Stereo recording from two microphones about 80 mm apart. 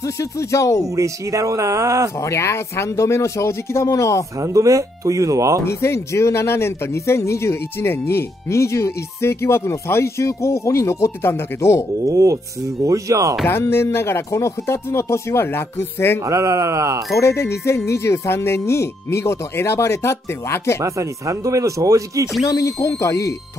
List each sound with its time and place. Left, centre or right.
0.0 s speech: left
0.8 s speech: right
2.1 s speech: left
4.4 s speech: right
5.7 s speech: left
12.1 s speech: right
13.5 s speech: left
16.3 s speech: right
17.1 s speech: left
20.8 s speech: right
22.5 s speech: left